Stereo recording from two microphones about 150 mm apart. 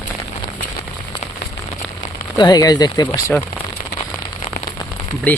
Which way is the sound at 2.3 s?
25° left (ahead or behind).